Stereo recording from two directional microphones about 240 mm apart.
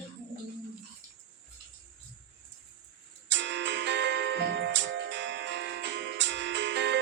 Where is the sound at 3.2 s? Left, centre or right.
Right.